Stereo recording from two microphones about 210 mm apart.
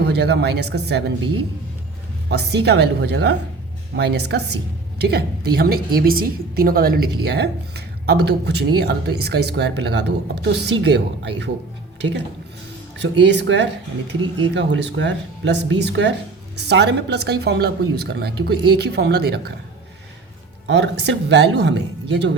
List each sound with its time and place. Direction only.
0.1 s a woman's voice: 55° right (ahead or behind)
2.3 s a woman's voice: 50° right (ahead or behind)
13.0 s a woman's voice: 55° right (ahead or behind)
20.7 s speech: 55° right (ahead or behind)